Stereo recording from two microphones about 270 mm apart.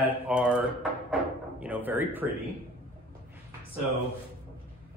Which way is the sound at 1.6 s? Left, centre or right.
Centre.